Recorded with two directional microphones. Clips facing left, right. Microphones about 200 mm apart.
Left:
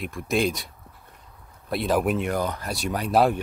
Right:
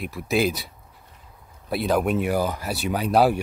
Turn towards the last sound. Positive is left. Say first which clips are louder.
# right 2 dB
turn(degrees=0)  # may be behind; listen again after turning